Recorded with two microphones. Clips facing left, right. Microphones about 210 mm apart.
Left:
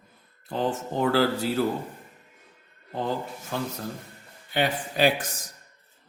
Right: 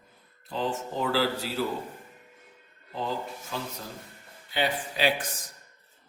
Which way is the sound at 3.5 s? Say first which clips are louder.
Left 6 dB; 55° left (ahead or behind).